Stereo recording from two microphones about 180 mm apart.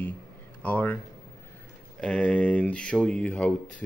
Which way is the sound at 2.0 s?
5° left (ahead or behind).